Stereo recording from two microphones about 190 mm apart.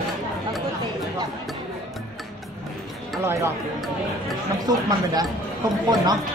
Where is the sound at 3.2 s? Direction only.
15° right (ahead or behind).